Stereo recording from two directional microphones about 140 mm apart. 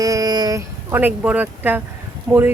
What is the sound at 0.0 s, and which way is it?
Speech, 25° right (ahead or behind).